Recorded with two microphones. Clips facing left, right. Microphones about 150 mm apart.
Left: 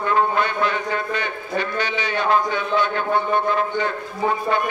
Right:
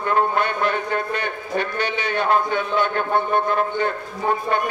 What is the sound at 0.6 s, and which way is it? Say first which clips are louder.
A man's voice: right 1 dB; 50° right (ahead or behind).